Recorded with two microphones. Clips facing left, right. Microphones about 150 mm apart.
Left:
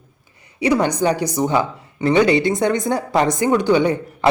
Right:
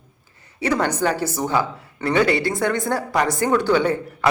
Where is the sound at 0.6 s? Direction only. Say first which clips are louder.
Left 4 dB; 15° left (ahead or behind).